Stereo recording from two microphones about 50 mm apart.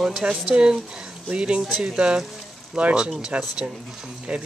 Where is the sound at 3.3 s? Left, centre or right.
Right.